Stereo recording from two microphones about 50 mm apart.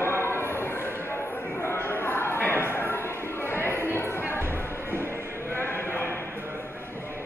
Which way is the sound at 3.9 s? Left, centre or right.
Left.